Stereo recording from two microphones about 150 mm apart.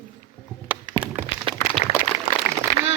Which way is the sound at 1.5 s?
35° right (ahead or behind).